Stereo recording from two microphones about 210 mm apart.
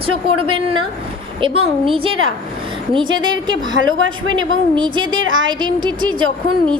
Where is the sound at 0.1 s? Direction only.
90° right.